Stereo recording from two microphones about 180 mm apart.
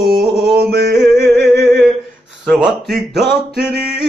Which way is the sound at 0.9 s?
Centre (ahead or behind).